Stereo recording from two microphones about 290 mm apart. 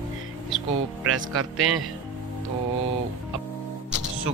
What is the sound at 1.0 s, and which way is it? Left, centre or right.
Speech, right.